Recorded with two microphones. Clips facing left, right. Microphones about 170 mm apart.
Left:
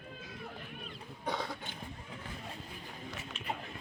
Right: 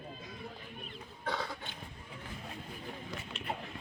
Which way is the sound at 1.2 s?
20° left (ahead or behind).